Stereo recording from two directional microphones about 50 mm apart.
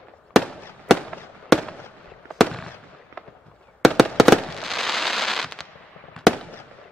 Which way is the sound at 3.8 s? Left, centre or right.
Centre.